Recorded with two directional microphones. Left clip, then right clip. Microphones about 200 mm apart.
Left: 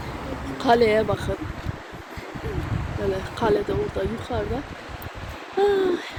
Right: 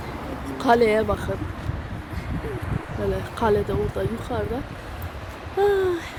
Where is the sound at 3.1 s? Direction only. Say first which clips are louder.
Right 1 dB; centre (ahead or behind).